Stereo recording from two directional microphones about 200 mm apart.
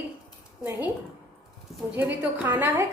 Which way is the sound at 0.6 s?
10° right (ahead or behind).